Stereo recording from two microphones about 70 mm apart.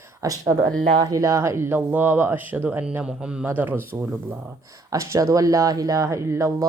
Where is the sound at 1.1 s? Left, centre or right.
Right.